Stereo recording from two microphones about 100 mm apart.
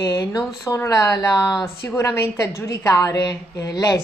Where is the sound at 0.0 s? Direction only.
40° left (ahead or behind).